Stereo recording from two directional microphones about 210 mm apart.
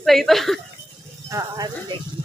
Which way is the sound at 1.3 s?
15° right (ahead or behind).